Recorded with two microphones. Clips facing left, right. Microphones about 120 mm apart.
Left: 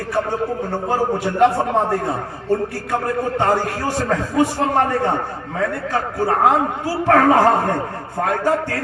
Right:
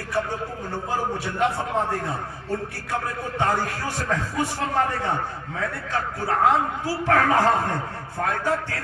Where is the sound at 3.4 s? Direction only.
45° left (ahead or behind).